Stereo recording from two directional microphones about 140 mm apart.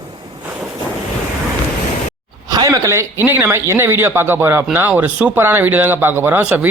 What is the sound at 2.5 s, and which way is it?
A man's voice, 25° right (ahead or behind).